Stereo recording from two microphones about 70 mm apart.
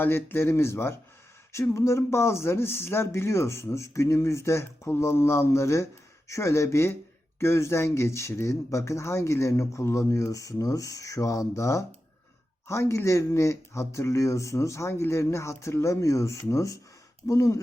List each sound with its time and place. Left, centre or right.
0.0 s speech: left